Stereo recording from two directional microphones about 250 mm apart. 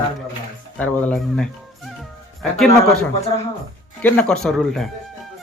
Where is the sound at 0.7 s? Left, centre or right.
Centre.